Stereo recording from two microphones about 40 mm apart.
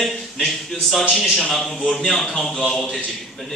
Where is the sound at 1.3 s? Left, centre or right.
Centre.